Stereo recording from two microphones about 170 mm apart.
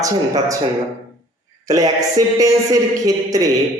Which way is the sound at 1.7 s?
20° right (ahead or behind).